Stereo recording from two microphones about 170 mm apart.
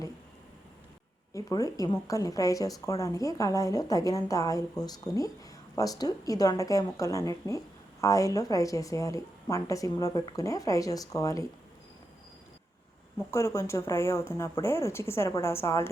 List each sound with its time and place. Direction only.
1.3 s speech: 20° left (ahead or behind)
13.3 s speech: 15° left (ahead or behind)